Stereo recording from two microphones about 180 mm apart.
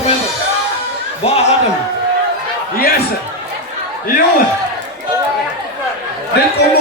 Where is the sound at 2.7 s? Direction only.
55° left (ahead or behind).